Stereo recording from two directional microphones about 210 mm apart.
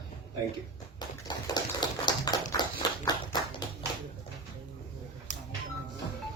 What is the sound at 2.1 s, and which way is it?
Tap, 20° left (ahead or behind).